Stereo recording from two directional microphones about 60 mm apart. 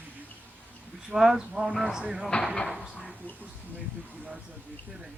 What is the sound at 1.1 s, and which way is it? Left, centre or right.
Speech, centre.